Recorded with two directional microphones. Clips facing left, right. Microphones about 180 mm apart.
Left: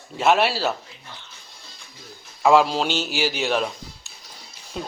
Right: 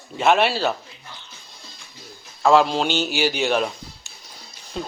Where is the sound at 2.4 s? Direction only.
5° left (ahead or behind).